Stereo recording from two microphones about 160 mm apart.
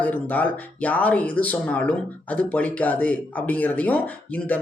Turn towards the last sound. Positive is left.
turn(degrees=10)  # may be behind; listen again after turning